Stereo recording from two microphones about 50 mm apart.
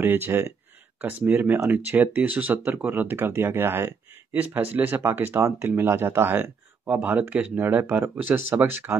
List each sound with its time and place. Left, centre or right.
0.0 s speech: right
2.8 s speech: right
4.3 s speech: right
6.9 s speech: right